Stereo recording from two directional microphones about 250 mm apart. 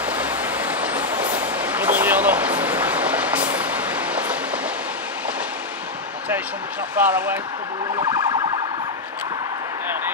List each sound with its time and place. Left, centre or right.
0.0 s vehicle: centre
7.0 s speech: centre
7.9 s emergency vehicle: centre